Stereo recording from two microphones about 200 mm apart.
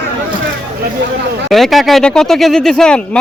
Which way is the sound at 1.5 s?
Centre (ahead or behind).